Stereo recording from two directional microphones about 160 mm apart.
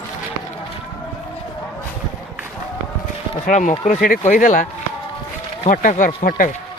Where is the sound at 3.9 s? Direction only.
65° left (ahead or behind).